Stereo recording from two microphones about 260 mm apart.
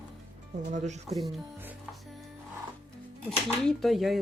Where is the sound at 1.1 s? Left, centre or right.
Centre.